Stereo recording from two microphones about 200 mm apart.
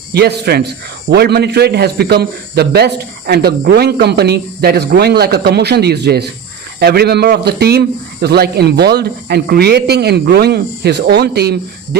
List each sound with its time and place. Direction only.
0.1 s a man's voice: 55° right (ahead or behind)